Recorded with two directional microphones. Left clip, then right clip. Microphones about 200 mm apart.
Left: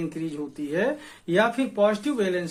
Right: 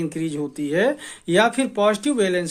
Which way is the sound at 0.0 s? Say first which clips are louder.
Right 5 dB; 45° right (ahead or behind).